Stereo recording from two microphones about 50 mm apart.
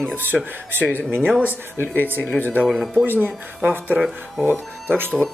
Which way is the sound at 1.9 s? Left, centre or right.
Right.